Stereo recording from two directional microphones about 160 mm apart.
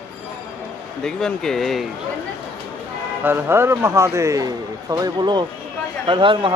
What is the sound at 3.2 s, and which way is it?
A man's voice, 15° right (ahead or behind).